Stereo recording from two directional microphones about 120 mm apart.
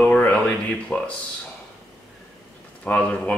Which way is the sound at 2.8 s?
10° left (ahead or behind).